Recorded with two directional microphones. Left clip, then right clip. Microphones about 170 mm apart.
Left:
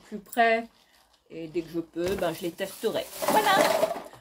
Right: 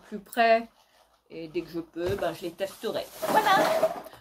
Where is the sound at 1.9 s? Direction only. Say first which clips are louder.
Left 1 dB; 30° left (ahead or behind).